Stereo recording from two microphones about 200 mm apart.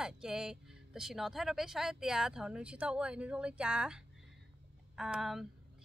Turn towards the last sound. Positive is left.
turn(degrees=0)  # may be behind; listen again after turning